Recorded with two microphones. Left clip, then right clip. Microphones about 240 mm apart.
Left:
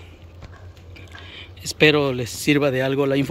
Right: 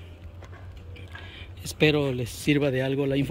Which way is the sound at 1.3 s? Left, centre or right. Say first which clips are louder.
Left 7 dB; centre.